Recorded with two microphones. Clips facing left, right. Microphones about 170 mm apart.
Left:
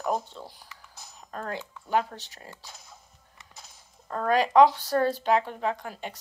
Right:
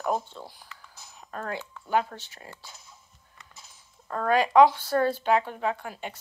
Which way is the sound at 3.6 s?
35° left (ahead or behind).